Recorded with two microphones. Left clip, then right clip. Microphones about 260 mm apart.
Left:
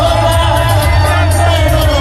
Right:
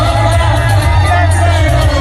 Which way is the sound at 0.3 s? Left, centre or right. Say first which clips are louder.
Left 2 dB; centre.